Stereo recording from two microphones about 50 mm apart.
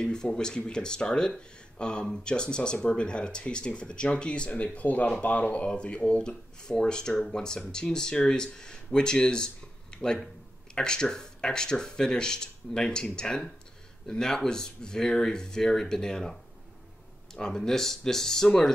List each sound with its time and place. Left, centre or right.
0.0 s speech: centre